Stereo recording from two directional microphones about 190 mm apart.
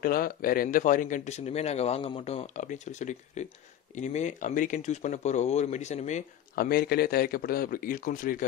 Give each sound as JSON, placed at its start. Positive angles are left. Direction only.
{"t": 0.0, "sound": "speech", "side_deg": 50}
{"t": 6.5, "sound": "a man's voice", "side_deg": 55}